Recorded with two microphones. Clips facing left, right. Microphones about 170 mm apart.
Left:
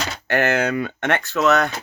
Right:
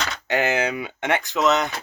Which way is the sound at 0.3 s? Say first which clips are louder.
Left 3 dB; 15° right (ahead or behind).